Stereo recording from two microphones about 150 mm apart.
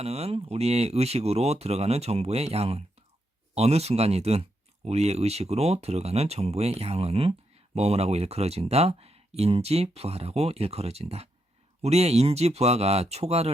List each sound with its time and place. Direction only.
0.0 s speech: 45° right (ahead or behind)